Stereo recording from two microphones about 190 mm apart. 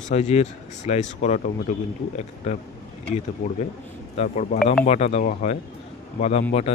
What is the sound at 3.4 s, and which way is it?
Speech, 35° left (ahead or behind).